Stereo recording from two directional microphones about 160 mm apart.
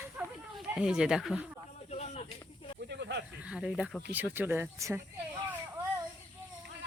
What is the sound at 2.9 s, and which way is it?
Snake, 90° right.